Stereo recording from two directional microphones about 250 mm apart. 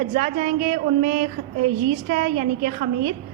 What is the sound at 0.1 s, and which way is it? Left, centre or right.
A woman's voice, right.